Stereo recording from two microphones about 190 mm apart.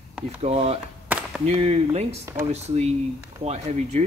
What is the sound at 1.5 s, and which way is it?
Speech, 35° right (ahead or behind).